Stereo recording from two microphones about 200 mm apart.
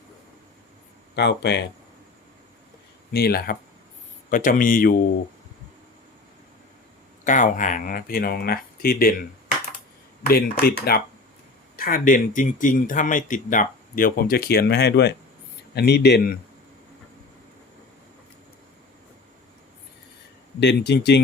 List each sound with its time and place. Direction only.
1.1 s speech: 60° left (ahead or behind)
3.1 s speech: 50° left (ahead or behind)
7.3 s speech: 40° left (ahead or behind)
10.2 s speech: 50° left (ahead or behind)
20.6 s speech: 60° left (ahead or behind)